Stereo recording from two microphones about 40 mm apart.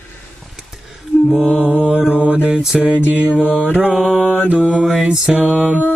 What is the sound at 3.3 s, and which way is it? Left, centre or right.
Mantra, left.